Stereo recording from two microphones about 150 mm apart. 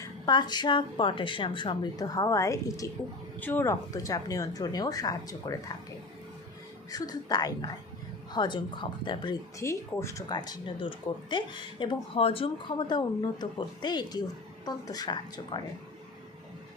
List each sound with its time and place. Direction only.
0.0 s speech: 30° left (ahead or behind)
6.9 s a woman's voice: 25° left (ahead or behind)
9.6 s speech: 20° left (ahead or behind)